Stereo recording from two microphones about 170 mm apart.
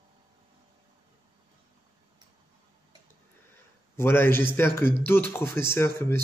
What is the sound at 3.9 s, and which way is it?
A man's voice, 15° left (ahead or behind).